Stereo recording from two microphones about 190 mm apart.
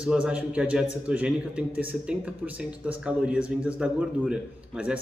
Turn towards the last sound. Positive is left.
turn(degrees=-5)  # may be behind; listen again after turning